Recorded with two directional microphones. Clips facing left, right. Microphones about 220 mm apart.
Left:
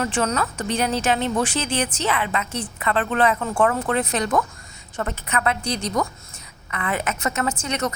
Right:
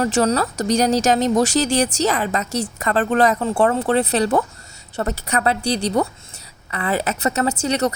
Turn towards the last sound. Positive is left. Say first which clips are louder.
# right 5 dB
turn(degrees=-35)  # may be behind; listen again after turning